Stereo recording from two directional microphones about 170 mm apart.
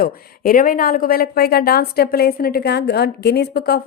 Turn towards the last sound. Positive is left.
turn(degrees=65)  # may be behind; listen again after turning